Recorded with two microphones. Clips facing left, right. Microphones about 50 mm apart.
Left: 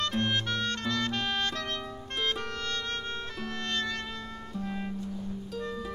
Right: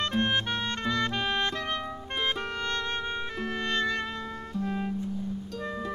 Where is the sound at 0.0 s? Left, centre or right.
Right.